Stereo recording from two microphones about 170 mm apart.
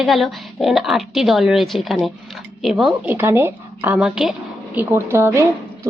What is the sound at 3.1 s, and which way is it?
A woman's voice, 15° right (ahead or behind).